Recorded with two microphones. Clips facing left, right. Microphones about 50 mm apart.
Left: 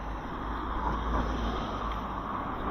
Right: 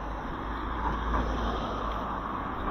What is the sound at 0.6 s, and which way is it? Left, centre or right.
Vehicle, right.